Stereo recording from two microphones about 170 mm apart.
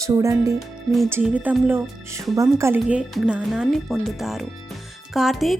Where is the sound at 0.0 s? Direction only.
20° right (ahead or behind).